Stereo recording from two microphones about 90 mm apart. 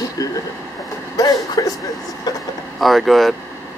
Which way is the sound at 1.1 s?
45° left (ahead or behind).